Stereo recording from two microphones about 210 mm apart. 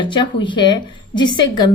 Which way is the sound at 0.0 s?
20° left (ahead or behind).